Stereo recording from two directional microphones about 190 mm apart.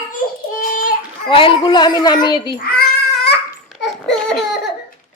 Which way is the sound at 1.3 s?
25° left (ahead or behind).